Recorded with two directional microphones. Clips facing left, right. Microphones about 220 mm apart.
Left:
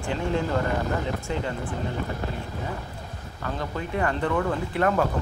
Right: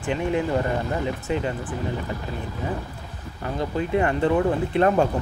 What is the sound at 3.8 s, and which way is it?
Speech, 20° right (ahead or behind).